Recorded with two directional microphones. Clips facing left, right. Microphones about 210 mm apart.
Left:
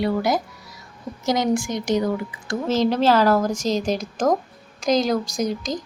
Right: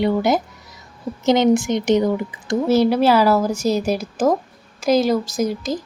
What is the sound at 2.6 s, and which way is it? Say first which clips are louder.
A woman's voice: right 3 dB; 10° right (ahead or behind).